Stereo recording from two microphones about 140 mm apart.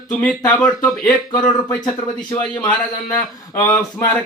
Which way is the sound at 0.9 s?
25° left (ahead or behind).